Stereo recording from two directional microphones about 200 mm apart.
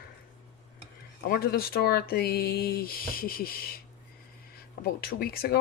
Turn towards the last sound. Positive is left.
turn(degrees=50)  # may be behind; listen again after turning